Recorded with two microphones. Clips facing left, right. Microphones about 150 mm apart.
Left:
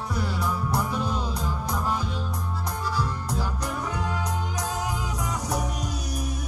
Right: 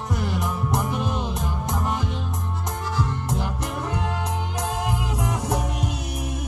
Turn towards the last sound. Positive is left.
turn(degrees=-25)  # may be behind; listen again after turning